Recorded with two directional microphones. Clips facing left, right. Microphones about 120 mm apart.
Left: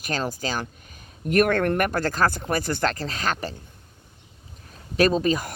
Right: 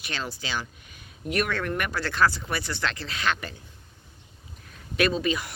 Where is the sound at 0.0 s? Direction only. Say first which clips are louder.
Left 7 dB; 45° left (ahead or behind).